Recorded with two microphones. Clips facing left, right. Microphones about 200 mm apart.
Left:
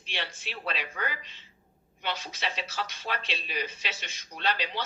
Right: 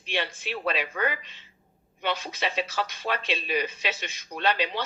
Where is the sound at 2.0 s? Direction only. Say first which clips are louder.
Right 5 dB; 55° right (ahead or behind).